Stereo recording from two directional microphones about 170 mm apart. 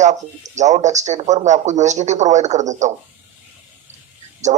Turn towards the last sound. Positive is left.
turn(degrees=-45)  # may be behind; listen again after turning